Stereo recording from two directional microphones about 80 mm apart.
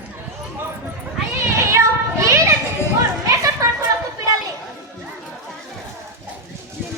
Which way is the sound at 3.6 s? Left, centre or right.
Right.